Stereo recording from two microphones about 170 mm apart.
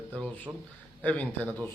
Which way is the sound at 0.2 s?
10° left (ahead or behind).